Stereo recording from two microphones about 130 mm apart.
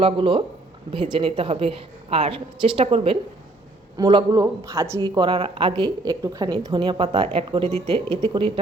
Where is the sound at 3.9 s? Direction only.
30° right (ahead or behind).